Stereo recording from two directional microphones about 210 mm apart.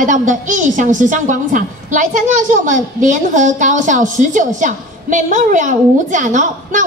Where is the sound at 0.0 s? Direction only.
35° right (ahead or behind).